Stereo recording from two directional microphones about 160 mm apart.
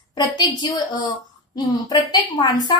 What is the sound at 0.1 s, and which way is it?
Speech, 25° left (ahead or behind).